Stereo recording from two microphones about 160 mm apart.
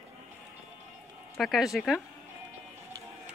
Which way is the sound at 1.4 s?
Centre (ahead or behind).